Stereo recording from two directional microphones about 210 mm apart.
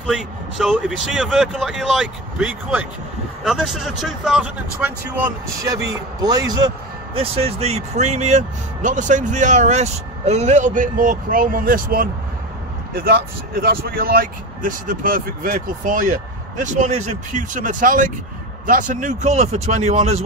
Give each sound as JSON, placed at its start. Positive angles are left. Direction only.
{"t": 0.0, "sound": "a man's voice", "side_deg": 0}
{"t": 7.2, "sound": "speech", "side_deg": -30}